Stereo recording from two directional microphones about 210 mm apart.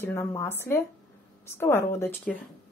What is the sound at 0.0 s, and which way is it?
A woman's voice, 10° left (ahead or behind).